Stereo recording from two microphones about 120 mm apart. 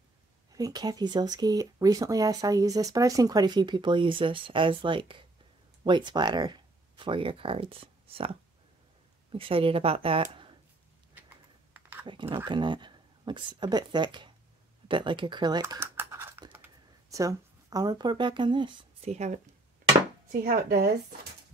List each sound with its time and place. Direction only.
0.5 s speech: 30° right (ahead or behind); by 10.2 s 50° right (ahead or behind)
11.1 s typing: 15° right (ahead or behind)
12.1 s speech: 45° right (ahead or behind)
16.0 s typing: 20° right (ahead or behind)
17.2 s speech: 30° right (ahead or behind)
19.0 s speech: 70° right (ahead or behind)